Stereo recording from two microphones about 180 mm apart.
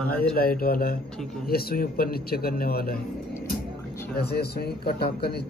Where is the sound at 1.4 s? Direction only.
55° left (ahead or behind).